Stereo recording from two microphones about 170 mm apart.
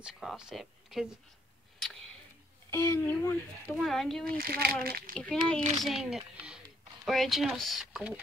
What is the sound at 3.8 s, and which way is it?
Speech, centre (ahead or behind).